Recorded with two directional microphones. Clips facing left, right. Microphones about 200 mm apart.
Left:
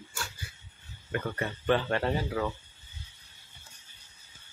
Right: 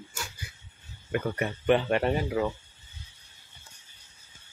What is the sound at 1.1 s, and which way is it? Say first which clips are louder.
Speech: right 4 dB; 15° right (ahead or behind).